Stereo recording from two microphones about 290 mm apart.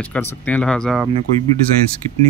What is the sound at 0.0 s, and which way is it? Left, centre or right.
Speech, centre.